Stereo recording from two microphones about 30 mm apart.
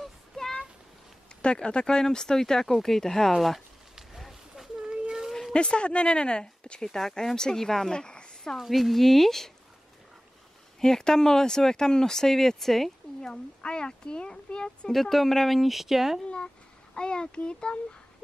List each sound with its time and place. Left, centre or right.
0.3 s a sound: left
1.4 s speech: left
2.0 s speech: left
3.3 s speech: centre
5.5 s speech: left
6.8 s speech: centre
7.9 s a woman's voice: left
8.5 s speech: centre
10.8 s speech: centre
13.7 s speech: left
14.9 s speech: centre
16.9 s speech: left